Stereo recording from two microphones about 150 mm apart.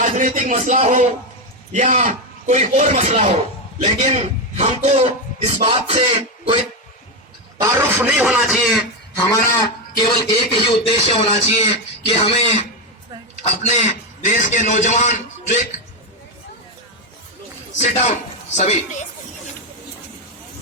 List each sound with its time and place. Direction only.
0.0 s a man's voice: 55° right (ahead or behind)
7.6 s speech: 15° right (ahead or behind)
9.2 s a man's voice: 20° left (ahead or behind)
13.4 s a man's voice: 50° left (ahead or behind)
17.7 s a man's voice: 50° left (ahead or behind)